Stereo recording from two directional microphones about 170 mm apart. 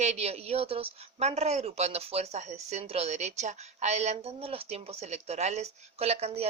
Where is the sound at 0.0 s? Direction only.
40° right (ahead or behind).